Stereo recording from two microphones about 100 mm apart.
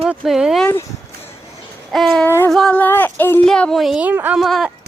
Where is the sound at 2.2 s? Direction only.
25° left (ahead or behind).